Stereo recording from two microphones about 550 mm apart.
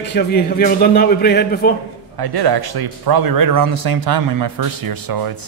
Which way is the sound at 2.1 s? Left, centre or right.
Right.